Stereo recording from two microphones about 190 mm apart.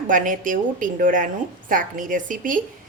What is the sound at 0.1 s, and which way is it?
Speech, 45° right (ahead or behind).